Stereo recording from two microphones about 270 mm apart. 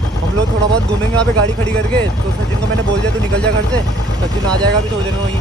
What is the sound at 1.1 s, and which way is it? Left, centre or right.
Speech, centre.